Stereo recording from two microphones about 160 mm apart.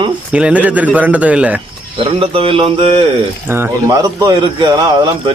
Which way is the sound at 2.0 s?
35° right (ahead or behind).